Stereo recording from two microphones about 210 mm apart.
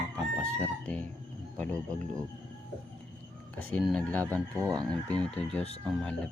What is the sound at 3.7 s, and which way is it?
Speech, 5° left (ahead or behind).